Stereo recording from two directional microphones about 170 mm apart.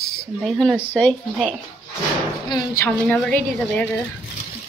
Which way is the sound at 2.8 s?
10° left (ahead or behind).